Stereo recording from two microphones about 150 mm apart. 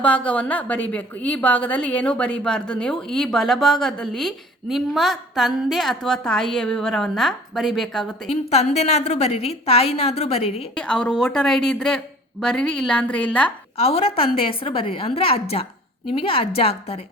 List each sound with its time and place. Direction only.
0.0 s a woman's voice: 10° left (ahead or behind)
8.3 s a woman's voice: 45° left (ahead or behind)
10.8 s a woman's voice: 5° left (ahead or behind)
13.7 s a woman's voice: 40° left (ahead or behind)